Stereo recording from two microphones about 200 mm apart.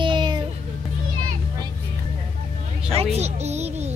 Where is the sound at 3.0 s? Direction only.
30° right (ahead or behind).